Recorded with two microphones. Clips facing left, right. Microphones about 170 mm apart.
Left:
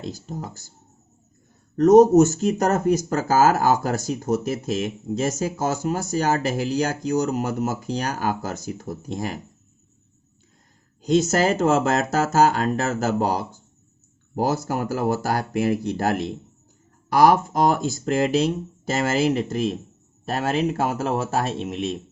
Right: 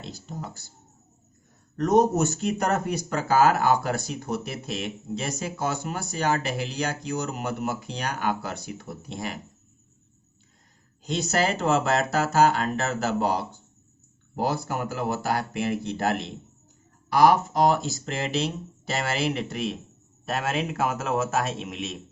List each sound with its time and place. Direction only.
0.0 s speech: 45° left (ahead or behind)
1.7 s speech: 40° left (ahead or behind)
11.0 s a man's voice: 45° left (ahead or behind)